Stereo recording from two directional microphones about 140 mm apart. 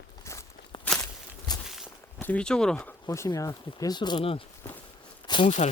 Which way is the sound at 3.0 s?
25° left (ahead or behind).